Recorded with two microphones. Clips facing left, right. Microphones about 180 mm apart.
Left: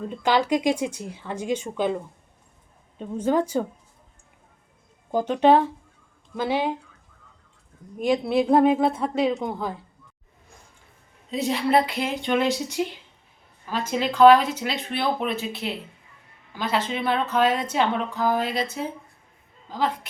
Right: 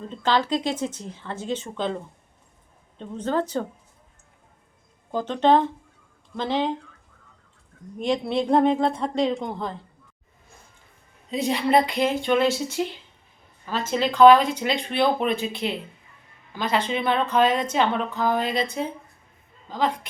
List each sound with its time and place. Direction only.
0.0 s speech: 15° left (ahead or behind)
3.0 s speech: 10° left (ahead or behind)
5.1 s speech: 10° left (ahead or behind)
7.9 s speech: 5° left (ahead or behind)
11.3 s speech: centre (ahead or behind)